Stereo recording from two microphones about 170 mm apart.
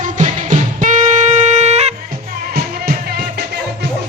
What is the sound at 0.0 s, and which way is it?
Music, 50° right (ahead or behind).